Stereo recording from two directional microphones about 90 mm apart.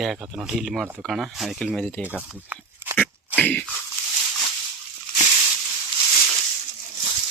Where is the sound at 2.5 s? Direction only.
20° right (ahead or behind).